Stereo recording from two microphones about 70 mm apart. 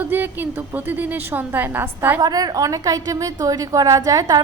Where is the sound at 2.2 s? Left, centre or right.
Right.